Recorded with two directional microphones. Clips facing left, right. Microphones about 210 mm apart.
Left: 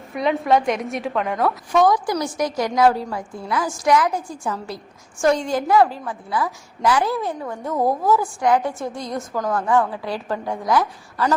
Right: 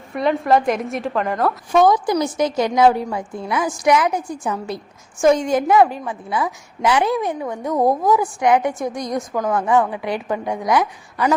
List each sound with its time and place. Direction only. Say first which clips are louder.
0.1 s a woman's voice: right 2 dB; centre (ahead or behind)
1.7 s a woman's voice: right 3 dB; 25° right (ahead or behind)